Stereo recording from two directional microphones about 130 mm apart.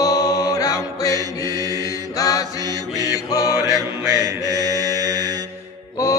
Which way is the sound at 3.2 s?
30° left (ahead or behind).